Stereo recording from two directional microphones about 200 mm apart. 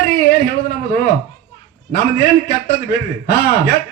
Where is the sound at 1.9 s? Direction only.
50° left (ahead or behind).